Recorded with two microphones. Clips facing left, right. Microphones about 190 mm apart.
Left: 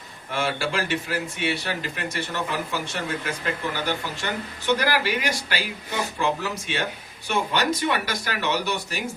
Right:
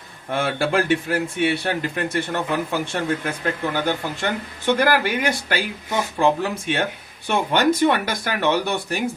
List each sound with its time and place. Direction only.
0.3 s speech: 55° right (ahead or behind)